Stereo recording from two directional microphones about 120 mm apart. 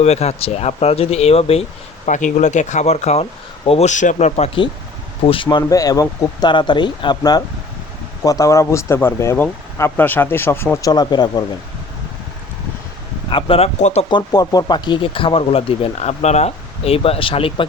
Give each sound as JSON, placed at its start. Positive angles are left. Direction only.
{"t": 0.0, "sound": "speech", "side_deg": 65}
{"t": 2.0, "sound": "speech", "side_deg": 90}
{"t": 5.2, "sound": "speech", "side_deg": 50}
{"t": 10.9, "sound": "speech", "side_deg": 35}
{"t": 13.3, "sound": "speech", "side_deg": 50}
{"t": 14.1, "sound": "speech", "side_deg": 35}